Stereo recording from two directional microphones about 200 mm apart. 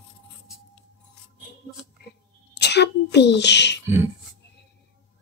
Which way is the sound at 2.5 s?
55° left (ahead or behind).